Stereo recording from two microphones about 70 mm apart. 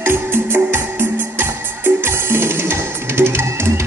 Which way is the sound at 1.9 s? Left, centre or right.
Right.